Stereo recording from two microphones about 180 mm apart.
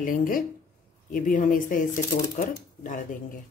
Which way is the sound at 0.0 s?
50° left (ahead or behind).